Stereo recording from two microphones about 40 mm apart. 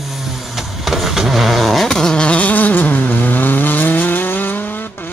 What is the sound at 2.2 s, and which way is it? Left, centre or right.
Vehicle, left.